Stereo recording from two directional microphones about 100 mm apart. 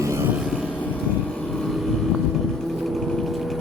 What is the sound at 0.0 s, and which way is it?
Vehicle, 30° right (ahead or behind).